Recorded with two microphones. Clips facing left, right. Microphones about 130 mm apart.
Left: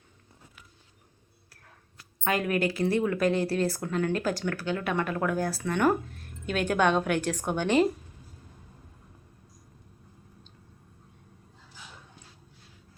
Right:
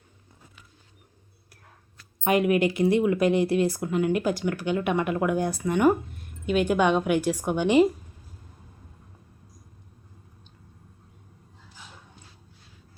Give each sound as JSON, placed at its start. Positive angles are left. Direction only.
{"t": 2.2, "sound": "speech", "side_deg": -20}